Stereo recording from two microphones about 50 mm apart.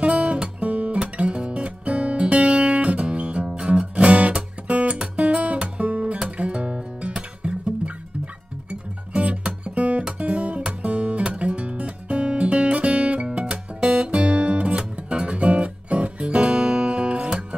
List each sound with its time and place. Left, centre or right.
0.0 s music: right
1.0 s guitar: right
3.9 s music: right
4.9 s music: centre